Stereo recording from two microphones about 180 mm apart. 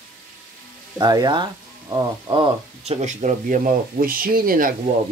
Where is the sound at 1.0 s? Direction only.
25° right (ahead or behind); by 4.8 s 50° right (ahead or behind).